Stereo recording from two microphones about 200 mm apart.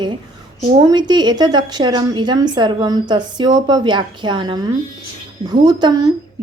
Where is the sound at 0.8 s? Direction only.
20° right (ahead or behind).